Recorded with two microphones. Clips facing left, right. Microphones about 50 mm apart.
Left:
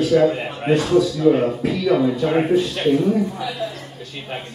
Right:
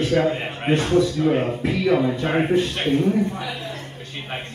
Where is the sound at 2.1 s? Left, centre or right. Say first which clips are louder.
Left 2 dB; right.